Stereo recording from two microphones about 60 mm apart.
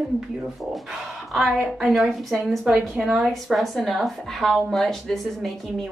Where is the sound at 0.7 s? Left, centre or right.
Centre.